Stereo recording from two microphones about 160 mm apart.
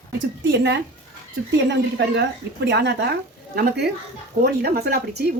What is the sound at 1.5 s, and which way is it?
Speech, 90° right.